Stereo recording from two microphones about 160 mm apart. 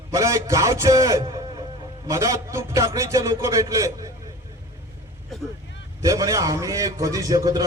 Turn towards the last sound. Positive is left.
turn(degrees=-25)  # may be behind; listen again after turning